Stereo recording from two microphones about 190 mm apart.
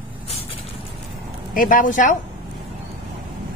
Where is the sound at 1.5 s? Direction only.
45° left (ahead or behind).